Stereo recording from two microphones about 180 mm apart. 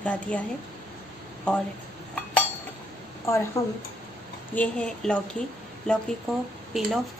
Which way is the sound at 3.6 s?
15° left (ahead or behind).